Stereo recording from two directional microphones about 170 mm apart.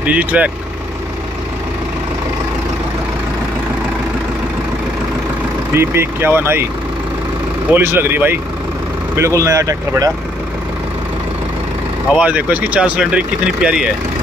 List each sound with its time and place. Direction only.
0.0 s speech: 10° right (ahead or behind)
5.8 s speech: 15° right (ahead or behind)
7.7 s speech: 15° right (ahead or behind)
12.1 s speech: 10° right (ahead or behind)